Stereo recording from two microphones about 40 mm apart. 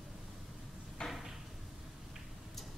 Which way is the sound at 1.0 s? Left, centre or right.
Centre.